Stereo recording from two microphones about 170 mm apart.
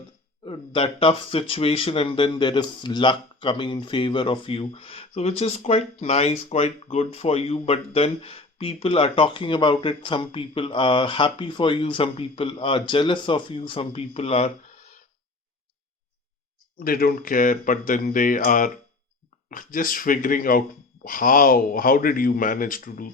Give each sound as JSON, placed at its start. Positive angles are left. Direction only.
{"t": 0.4, "sound": "speech", "side_deg": 30}
{"t": 16.8, "sound": "speech", "side_deg": 60}